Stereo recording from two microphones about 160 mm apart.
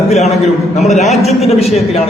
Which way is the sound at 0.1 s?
45° left (ahead or behind).